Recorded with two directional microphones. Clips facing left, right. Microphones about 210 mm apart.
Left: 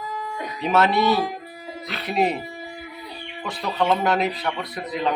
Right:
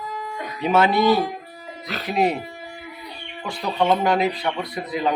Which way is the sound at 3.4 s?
Centre (ahead or behind).